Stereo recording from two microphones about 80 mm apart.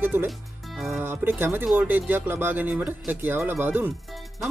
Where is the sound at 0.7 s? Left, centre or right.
Centre.